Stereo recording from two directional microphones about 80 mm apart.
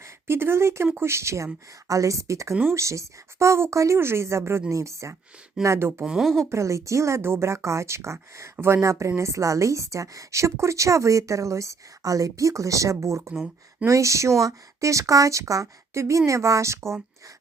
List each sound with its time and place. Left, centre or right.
0.0 s a woman's voice: right
6.1 s speech: centre
6.4 s a woman's voice: right